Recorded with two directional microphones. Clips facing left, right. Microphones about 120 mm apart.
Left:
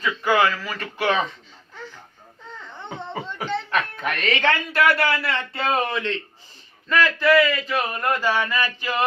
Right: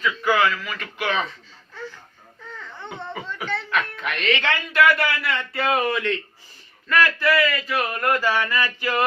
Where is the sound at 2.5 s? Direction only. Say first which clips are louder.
Left 1 dB; 20° left (ahead or behind).